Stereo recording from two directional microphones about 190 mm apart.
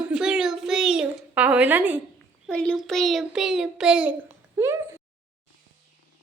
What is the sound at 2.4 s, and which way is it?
A woman's voice, 5° left (ahead or behind).